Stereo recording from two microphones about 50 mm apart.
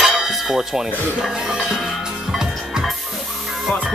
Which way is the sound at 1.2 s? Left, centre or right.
Centre.